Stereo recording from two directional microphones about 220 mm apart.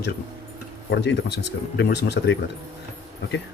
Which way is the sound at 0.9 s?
50° left (ahead or behind).